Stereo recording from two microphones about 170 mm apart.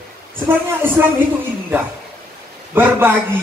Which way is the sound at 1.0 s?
15° right (ahead or behind).